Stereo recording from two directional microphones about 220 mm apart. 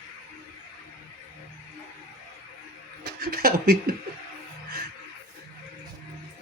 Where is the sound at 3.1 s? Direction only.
45° right (ahead or behind).